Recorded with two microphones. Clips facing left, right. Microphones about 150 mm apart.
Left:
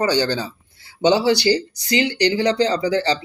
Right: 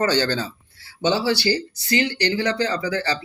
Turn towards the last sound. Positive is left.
turn(degrees=20)  # may be behind; listen again after turning